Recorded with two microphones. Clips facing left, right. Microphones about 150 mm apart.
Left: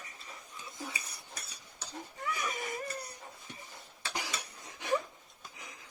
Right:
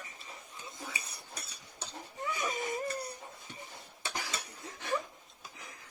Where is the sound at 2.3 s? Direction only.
25° right (ahead or behind).